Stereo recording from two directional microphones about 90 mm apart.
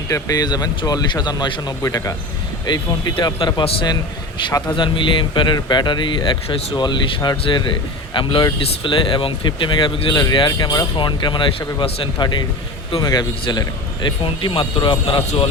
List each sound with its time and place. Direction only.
0.1 s speech: 45° left (ahead or behind)
2.6 s speech: 55° left (ahead or behind)
3.3 s speech: 90° left
4.7 s speech: 65° left (ahead or behind)
7.4 s speech: 65° left (ahead or behind)
14.3 s a man's voice: 80° left